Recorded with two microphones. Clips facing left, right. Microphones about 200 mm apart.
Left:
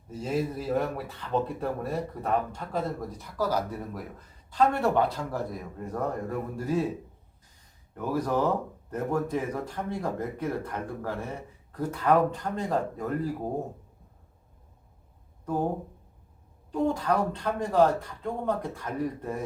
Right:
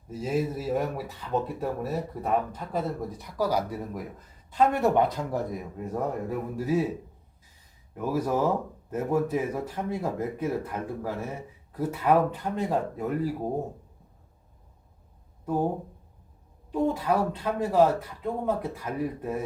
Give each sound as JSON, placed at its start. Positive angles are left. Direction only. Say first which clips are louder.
{"t": 0.1, "sound": "speech", "louder": "right 1 dB", "side_deg": -5}
{"t": 5.5, "sound": "speech", "louder": "right 2 dB", "side_deg": -5}
{"t": 7.9, "sound": "speech", "louder": "right 1 dB", "side_deg": -5}
{"t": 16.7, "sound": "speech", "louder": "right 1 dB", "side_deg": -5}